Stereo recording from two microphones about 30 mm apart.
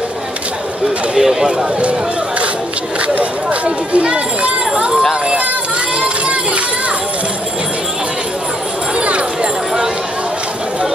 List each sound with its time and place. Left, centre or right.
1.1 s speech: centre
3.2 s speech: right